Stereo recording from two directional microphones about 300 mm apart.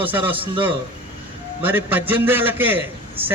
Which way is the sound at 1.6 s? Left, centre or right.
Centre.